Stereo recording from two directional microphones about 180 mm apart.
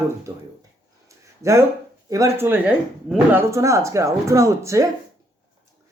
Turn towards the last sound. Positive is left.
turn(degrees=-15)  # may be behind; listen again after turning